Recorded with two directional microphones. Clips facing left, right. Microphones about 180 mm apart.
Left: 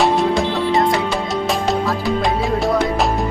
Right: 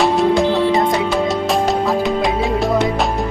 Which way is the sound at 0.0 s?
Centre (ahead or behind).